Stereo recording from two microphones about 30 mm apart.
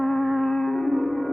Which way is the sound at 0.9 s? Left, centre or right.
Centre.